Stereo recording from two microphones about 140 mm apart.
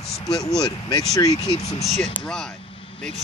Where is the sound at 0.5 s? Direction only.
5° left (ahead or behind).